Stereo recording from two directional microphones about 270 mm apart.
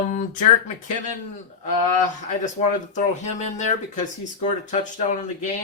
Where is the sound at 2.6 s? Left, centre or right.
Left.